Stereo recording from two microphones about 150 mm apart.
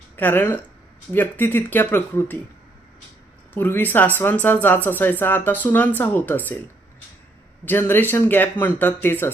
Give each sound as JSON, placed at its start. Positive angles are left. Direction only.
{"t": 0.2, "sound": "speech", "side_deg": 15}
{"t": 3.5, "sound": "speech", "side_deg": 10}
{"t": 7.6, "sound": "speech", "side_deg": 15}